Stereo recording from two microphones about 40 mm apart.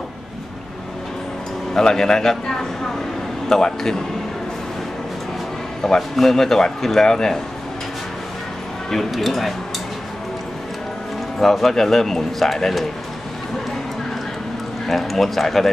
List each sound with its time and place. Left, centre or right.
1.7 s speech: centre
5.9 s speech: centre
9.1 s speech: centre
11.3 s speech: centre
14.9 s speech: centre